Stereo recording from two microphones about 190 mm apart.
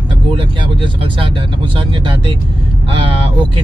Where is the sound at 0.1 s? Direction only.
25° right (ahead or behind).